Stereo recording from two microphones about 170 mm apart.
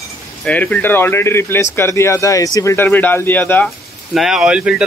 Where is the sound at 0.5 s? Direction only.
10° left (ahead or behind).